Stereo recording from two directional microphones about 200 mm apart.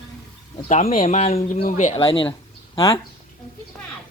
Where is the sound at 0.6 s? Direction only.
30° left (ahead or behind).